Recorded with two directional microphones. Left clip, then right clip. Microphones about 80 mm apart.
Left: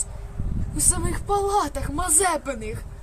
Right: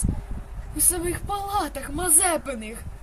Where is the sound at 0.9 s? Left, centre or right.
Left.